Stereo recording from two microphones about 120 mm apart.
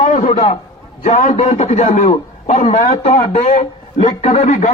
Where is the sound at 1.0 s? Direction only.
90° left.